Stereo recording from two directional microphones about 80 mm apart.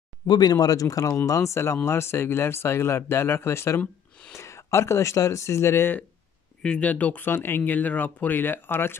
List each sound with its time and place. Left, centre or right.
0.3 s speech: left
6.6 s speech: centre